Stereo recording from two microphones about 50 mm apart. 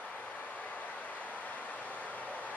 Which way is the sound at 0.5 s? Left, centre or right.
Left.